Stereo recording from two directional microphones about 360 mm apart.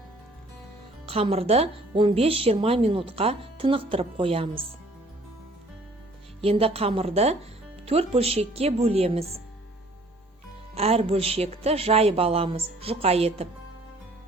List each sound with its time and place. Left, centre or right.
1.0 s speech: centre
6.4 s speech: centre
10.8 s speech: centre